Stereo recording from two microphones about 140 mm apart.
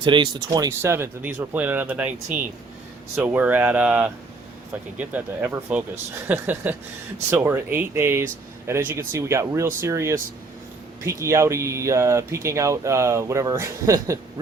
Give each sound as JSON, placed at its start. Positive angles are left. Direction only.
{"t": 0.0, "sound": "speech", "side_deg": -35}
{"t": 0.7, "sound": "speech", "side_deg": -15}